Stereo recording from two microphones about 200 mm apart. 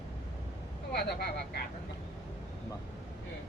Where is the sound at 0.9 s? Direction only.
55° left (ahead or behind).